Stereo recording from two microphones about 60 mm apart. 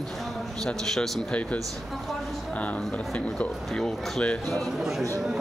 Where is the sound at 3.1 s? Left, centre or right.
Centre.